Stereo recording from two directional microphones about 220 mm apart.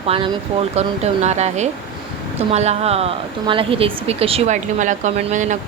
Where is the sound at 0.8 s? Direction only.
30° right (ahead or behind).